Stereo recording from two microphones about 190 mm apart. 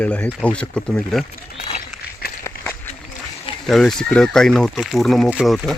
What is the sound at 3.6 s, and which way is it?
Speech, centre (ahead or behind).